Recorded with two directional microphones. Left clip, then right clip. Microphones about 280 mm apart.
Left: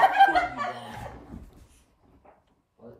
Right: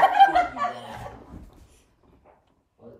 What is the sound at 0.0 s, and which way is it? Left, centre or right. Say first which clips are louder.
Snicker: right 2 dB; centre.